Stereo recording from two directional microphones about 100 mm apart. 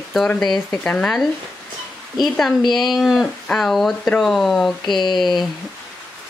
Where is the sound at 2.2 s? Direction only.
Centre (ahead or behind).